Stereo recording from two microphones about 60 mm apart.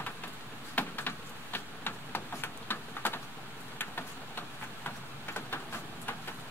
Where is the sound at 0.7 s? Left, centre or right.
Left.